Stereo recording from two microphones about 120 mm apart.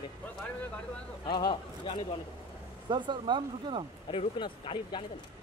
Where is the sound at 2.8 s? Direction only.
40° right (ahead or behind).